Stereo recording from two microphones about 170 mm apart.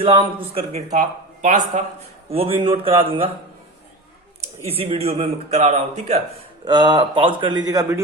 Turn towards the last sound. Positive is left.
turn(degrees=-20)  # may be behind; listen again after turning